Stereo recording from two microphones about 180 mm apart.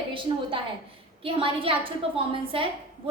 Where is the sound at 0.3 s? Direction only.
30° right (ahead or behind).